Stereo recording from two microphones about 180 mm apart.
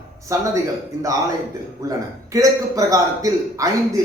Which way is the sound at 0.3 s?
20° right (ahead or behind).